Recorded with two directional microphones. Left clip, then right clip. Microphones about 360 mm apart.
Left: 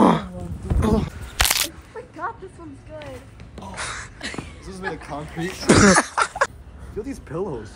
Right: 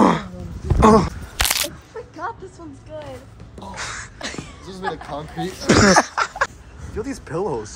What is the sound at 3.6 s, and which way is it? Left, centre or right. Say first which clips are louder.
Gasp: right 1 dB; centre.